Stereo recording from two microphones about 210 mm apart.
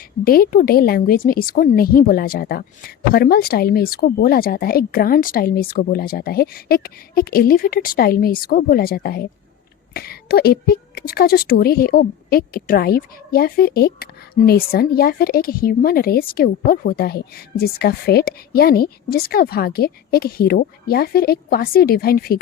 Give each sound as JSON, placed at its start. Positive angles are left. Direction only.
{"t": 0.3, "sound": "a woman's voice", "side_deg": 45}